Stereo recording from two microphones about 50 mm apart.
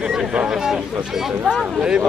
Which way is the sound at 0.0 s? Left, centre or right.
Centre.